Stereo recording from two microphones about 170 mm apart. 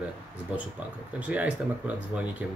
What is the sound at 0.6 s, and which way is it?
Speech, 10° right (ahead or behind).